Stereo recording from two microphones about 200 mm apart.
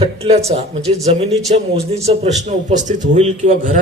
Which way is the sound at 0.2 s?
30° right (ahead or behind).